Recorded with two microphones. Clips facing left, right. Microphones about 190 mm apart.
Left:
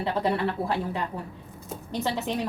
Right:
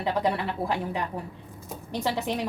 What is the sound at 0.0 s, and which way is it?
Speech, 15° right (ahead or behind).